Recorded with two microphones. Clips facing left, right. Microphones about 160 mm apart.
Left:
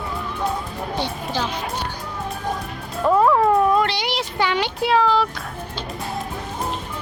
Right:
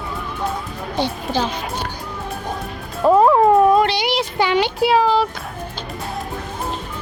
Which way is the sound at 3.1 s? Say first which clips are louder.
Right 4 dB; 25° right (ahead or behind).